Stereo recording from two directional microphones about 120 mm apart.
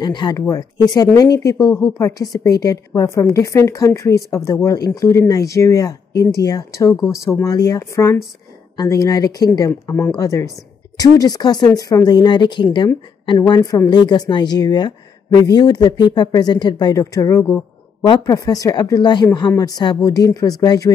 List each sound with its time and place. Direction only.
0.0 s a woman's voice: 35° left (ahead or behind)
13.5 s a woman's voice: 30° left (ahead or behind)